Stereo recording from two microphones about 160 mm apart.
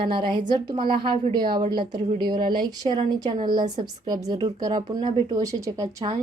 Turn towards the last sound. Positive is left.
turn(degrees=-20)  # may be behind; listen again after turning